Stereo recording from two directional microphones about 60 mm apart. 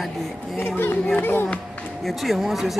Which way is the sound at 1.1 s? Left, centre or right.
Left.